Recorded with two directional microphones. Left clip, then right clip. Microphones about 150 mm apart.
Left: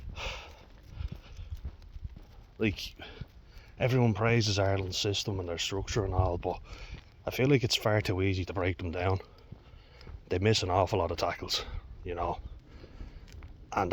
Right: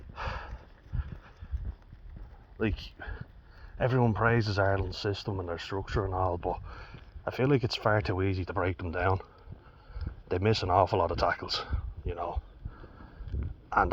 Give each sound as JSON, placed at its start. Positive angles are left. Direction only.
{"t": 0.1, "sound": "horse", "side_deg": 25}
{"t": 2.6, "sound": "speech", "side_deg": 30}
{"t": 13.7, "sound": "a sound", "side_deg": 30}